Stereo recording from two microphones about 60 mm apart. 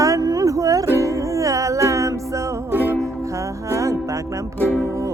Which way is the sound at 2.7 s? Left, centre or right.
Right.